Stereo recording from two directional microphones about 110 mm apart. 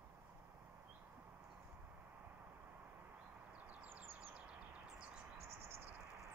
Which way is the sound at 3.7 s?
10° right (ahead or behind).